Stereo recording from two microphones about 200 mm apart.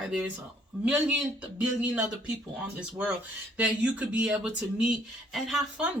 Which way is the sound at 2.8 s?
5° right (ahead or behind).